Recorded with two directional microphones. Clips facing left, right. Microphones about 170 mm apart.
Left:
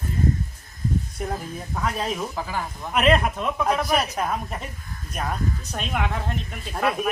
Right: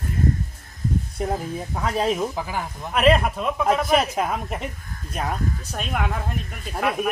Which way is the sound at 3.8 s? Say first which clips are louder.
Right 3 dB; 25° right (ahead or behind).